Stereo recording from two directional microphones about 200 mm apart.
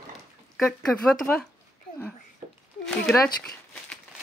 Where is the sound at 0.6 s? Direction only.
5° left (ahead or behind).